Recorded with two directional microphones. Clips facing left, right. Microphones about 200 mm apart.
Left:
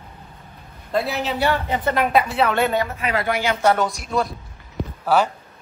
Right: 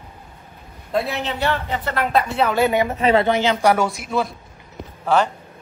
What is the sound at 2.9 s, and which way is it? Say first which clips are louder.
Speech: right 8 dB; 30° right (ahead or behind).